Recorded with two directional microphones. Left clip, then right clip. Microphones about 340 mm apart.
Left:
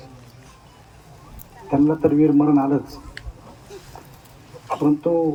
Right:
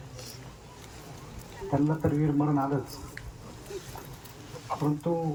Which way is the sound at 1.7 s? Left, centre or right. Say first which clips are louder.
Left 11 dB; left.